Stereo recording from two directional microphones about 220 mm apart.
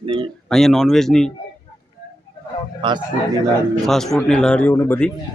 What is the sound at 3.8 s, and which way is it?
Speech, centre (ahead or behind).